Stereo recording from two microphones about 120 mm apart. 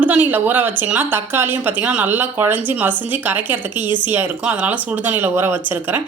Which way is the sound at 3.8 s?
40° left (ahead or behind).